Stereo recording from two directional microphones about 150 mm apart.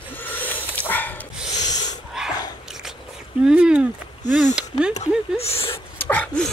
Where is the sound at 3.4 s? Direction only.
5° right (ahead or behind).